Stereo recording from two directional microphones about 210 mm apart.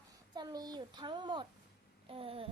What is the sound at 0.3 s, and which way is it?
A woman's voice, 20° right (ahead or behind).